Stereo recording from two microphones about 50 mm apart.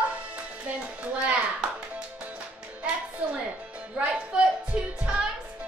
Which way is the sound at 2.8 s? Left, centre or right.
Right.